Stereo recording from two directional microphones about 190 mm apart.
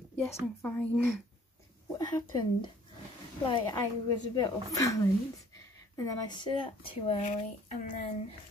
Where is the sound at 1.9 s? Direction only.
20° left (ahead or behind); by 8.0 s 40° left (ahead or behind).